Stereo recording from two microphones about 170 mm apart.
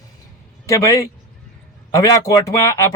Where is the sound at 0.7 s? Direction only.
20° left (ahead or behind).